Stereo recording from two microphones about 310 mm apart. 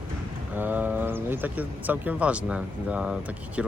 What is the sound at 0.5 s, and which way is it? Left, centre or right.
Speech, centre.